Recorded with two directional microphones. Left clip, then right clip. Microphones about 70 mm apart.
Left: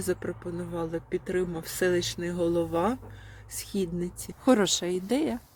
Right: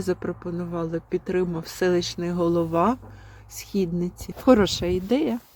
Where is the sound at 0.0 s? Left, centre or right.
Right.